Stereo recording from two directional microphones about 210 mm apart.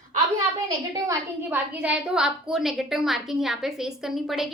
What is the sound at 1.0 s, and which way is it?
A woman's voice, 5° right (ahead or behind).